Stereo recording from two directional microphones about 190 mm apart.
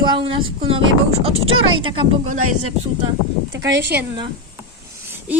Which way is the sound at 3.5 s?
70° right (ahead or behind).